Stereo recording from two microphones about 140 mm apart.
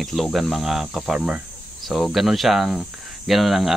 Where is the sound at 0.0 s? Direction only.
Centre (ahead or behind).